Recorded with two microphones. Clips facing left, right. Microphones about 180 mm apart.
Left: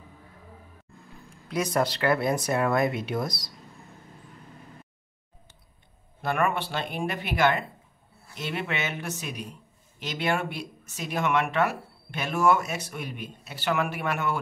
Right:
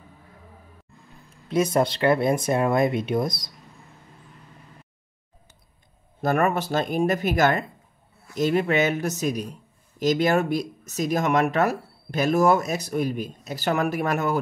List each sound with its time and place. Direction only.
1.5 s speech: 25° right (ahead or behind)
6.2 s a man's voice: 40° right (ahead or behind)